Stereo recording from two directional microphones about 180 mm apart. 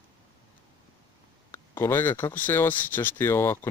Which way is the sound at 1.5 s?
10° left (ahead or behind).